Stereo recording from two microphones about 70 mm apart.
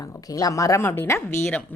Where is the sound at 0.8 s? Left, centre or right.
Left.